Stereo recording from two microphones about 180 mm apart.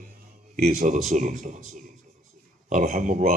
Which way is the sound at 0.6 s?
40° right (ahead or behind).